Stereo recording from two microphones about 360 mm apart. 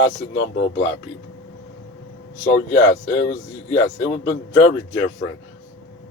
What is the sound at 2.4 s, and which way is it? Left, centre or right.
Speech, left.